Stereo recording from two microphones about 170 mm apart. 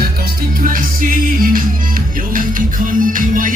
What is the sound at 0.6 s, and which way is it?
Music, 55° right (ahead or behind).